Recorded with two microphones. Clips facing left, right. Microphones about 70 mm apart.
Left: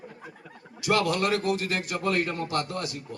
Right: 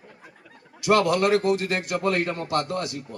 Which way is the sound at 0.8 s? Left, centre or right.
Right.